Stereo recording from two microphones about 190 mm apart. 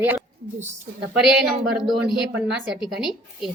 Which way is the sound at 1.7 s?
Centre (ahead or behind).